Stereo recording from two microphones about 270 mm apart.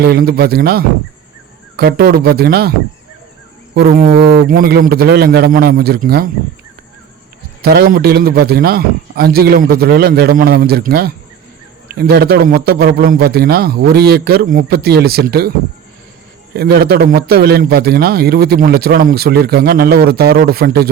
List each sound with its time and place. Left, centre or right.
0.0 s a man's voice: right
3.8 s a man's voice: right
7.6 s a man's voice: right
16.6 s a man's voice: right